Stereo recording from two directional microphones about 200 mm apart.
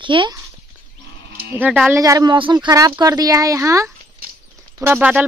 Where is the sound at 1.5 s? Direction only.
10° right (ahead or behind).